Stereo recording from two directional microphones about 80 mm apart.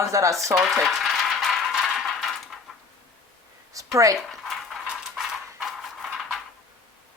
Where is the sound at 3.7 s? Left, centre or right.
Right.